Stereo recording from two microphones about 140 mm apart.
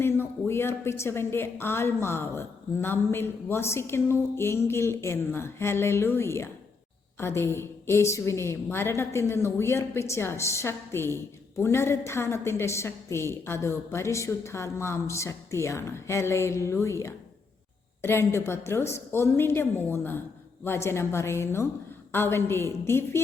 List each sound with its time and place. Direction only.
0.0 s a woman's voice: 15° left (ahead or behind)